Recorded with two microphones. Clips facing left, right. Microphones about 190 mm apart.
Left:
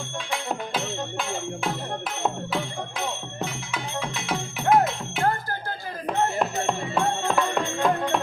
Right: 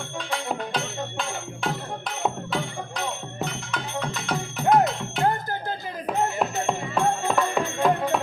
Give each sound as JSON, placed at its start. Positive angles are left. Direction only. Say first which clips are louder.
{"t": 0.3, "sound": "music", "louder": "right 1 dB", "side_deg": 5}
{"t": 2.2, "sound": "music", "louder": "right 1 dB", "side_deg": 0}
{"t": 5.2, "sound": "a sound", "louder": "right 1 dB", "side_deg": -20}
{"t": 6.1, "sound": "music", "louder": "even", "side_deg": 0}